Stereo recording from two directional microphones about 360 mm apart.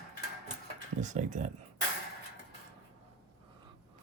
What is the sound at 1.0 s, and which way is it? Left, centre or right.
Speech, centre.